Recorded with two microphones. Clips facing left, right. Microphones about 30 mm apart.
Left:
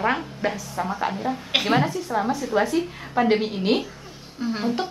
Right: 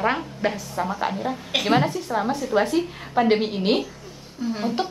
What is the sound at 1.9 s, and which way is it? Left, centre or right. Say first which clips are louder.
Speech: even; centre.